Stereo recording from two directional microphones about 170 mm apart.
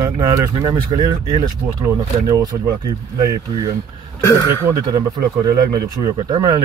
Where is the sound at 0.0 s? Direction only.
20° right (ahead or behind).